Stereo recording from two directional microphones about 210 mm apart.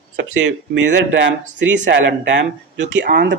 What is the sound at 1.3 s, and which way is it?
Speech, 60° right (ahead or behind).